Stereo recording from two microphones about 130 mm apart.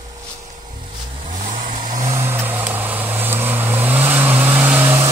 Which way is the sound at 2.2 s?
20° right (ahead or behind).